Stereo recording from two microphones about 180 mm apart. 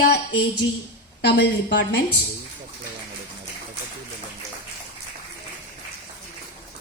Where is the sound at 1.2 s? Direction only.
65° left (ahead or behind).